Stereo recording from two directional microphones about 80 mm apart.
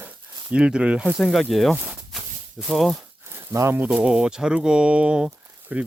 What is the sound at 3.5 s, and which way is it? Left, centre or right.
Speech, right.